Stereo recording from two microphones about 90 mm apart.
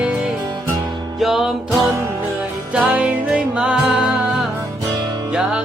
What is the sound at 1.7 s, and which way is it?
Music, 35° right (ahead or behind).